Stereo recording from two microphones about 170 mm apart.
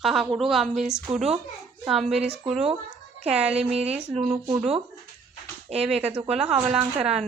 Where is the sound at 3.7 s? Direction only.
40° right (ahead or behind).